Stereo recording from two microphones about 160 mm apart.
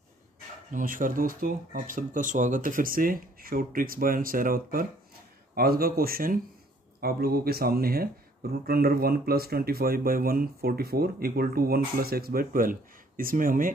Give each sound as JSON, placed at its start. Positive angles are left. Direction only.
{"t": 0.7, "sound": "speech", "side_deg": -55}